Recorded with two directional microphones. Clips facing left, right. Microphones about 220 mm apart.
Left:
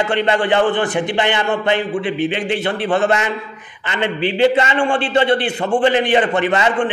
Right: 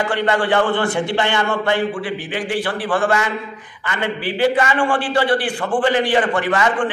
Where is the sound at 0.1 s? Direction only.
20° left (ahead or behind).